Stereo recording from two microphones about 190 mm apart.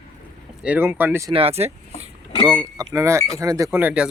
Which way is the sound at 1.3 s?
30° right (ahead or behind).